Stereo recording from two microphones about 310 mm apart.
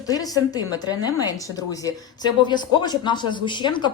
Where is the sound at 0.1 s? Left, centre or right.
Centre.